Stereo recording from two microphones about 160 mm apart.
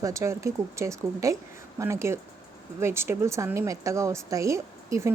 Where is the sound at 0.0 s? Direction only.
20° right (ahead or behind).